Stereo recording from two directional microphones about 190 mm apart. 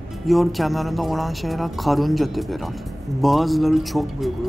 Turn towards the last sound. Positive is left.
turn(degrees=0)  # may be behind; listen again after turning